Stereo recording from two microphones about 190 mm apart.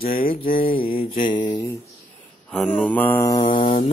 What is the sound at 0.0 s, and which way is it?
Mantra, 45° left (ahead or behind).